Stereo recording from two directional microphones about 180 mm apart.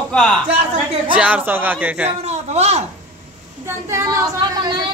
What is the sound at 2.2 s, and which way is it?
Speech, 35° right (ahead or behind).